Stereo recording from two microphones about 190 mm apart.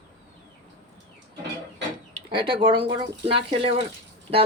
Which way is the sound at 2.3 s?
25° right (ahead or behind).